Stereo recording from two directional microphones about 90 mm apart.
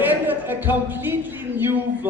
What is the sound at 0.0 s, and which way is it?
Speech, 20° right (ahead or behind).